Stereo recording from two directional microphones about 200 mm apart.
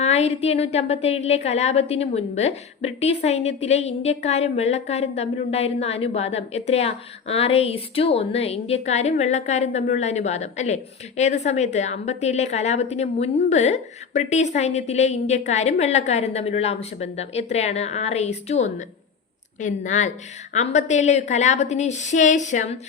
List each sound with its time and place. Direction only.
0.0 s a woman's voice: 35° left (ahead or behind)